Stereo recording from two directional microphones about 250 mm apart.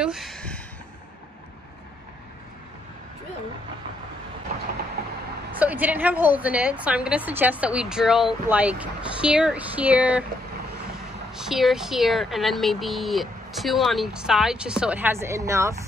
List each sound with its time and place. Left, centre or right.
0.0 s a sound: centre
5.0 s vehicle: right
5.6 s a woman's voice: centre
11.3 s a woman's voice: centre